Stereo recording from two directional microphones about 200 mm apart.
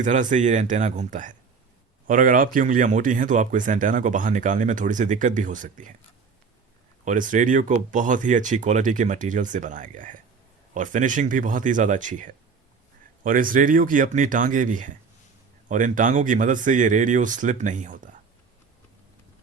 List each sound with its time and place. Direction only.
0.0 s speech: 40° right (ahead or behind)
7.0 s speech: 40° right (ahead or behind)